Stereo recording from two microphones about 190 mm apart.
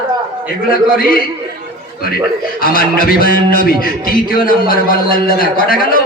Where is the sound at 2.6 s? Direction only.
50° left (ahead or behind).